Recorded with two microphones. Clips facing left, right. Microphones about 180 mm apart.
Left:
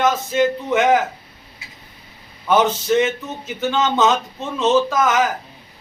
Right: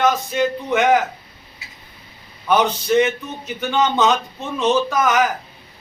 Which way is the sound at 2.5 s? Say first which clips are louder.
Left 1 dB; 25° left (ahead or behind).